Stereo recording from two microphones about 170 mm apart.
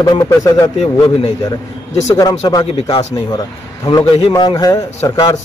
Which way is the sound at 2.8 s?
30° left (ahead or behind).